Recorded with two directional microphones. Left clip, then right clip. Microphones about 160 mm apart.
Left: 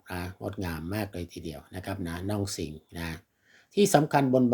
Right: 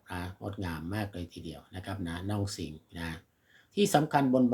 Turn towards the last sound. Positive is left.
turn(degrees=30)  # may be behind; listen again after turning